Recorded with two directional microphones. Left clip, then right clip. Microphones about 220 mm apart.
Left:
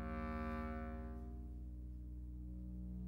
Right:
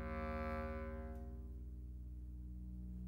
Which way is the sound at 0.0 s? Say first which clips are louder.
Right 2 dB; 20° right (ahead or behind).